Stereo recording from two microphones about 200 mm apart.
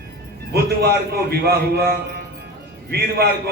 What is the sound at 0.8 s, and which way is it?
A man's voice, 50° right (ahead or behind).